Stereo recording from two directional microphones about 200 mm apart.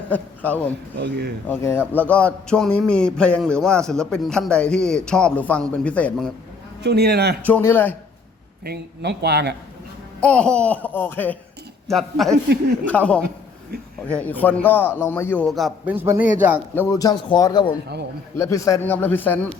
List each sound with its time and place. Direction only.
0.1 s a man's voice: 5° left (ahead or behind)
0.9 s speech: 60° right (ahead or behind)
1.5 s a man's voice: 10° left (ahead or behind)
6.8 s a man's voice: 55° right (ahead or behind)
7.4 s a man's voice: 10° left (ahead or behind)
8.6 s speech: 55° right (ahead or behind)
10.2 s a man's voice: 5° left (ahead or behind)
16.0 s a man's voice: 10° right (ahead or behind)
16.7 s a man's voice: 15° left (ahead or behind)